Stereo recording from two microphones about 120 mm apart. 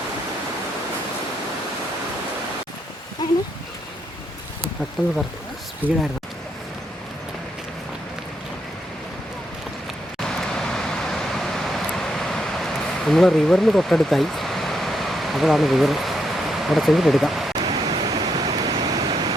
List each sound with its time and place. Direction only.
5.8 s speech: 15° right (ahead or behind)
10.2 s vehicle: 5° left (ahead or behind)
13.1 s speech: centre (ahead or behind)
17.6 s pink noise: 35° right (ahead or behind)